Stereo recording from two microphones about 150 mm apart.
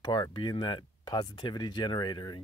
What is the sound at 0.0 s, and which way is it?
Speech, 30° left (ahead or behind).